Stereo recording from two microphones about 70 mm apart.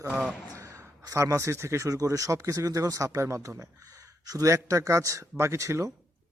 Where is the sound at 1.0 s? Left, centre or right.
Right.